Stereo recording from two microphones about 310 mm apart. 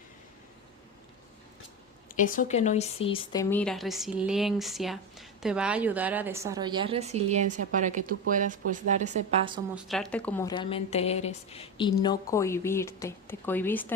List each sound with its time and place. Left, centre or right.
2.1 s speech: left
3.5 s a woman's voice: centre; by 9.6 s right
9.7 s speech: centre